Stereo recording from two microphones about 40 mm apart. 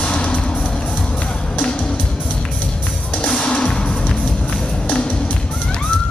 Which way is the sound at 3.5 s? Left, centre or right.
Left.